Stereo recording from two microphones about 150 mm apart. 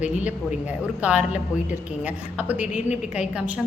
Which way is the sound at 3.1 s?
5° right (ahead or behind).